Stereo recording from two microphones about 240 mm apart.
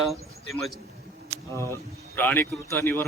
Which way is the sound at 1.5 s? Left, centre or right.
Centre.